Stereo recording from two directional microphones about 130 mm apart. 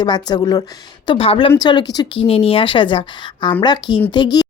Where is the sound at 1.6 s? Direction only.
35° left (ahead or behind).